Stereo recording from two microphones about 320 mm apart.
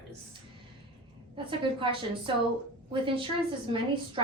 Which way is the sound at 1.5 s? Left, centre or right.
Centre.